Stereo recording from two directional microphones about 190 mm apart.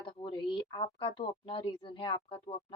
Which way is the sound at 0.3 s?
25° left (ahead or behind).